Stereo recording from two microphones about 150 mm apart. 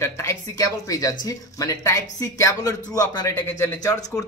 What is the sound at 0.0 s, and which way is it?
Speech, 20° left (ahead or behind).